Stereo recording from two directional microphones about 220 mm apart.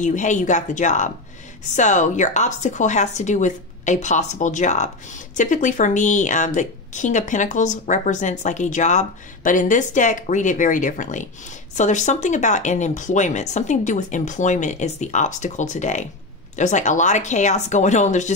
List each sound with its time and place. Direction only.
0.0 s a woman's voice: 35° left (ahead or behind)